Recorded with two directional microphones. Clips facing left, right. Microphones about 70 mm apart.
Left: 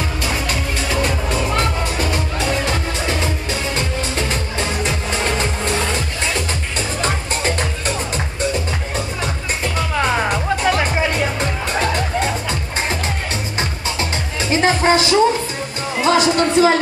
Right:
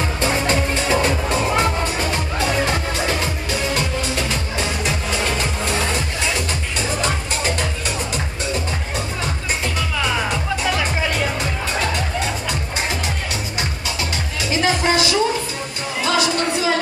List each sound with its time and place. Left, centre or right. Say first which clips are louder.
0.2 s music: right 6 dB; right
4.6 s music: left 1 dB; left
9.9 s music: left 4 dB; left
14.5 s music: left 4 dB; left